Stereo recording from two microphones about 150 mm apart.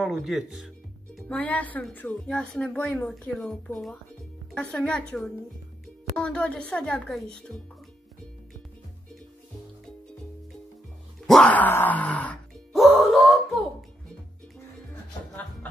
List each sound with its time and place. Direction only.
0.0 s a woman's voice: centre (ahead or behind)
1.3 s a woman's voice: 10° left (ahead or behind)
11.2 s groan: 5° left (ahead or behind)
12.7 s wail: centre (ahead or behind)